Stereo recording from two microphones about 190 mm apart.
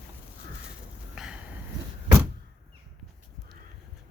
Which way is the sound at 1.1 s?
5° right (ahead or behind).